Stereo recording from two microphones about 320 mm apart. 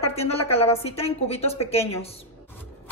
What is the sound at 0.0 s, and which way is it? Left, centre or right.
A woman's voice, centre.